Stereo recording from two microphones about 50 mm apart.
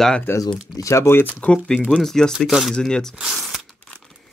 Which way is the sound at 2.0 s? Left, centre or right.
Centre.